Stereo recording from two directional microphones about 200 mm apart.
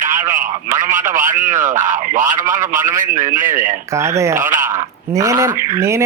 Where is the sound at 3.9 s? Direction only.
15° right (ahead or behind).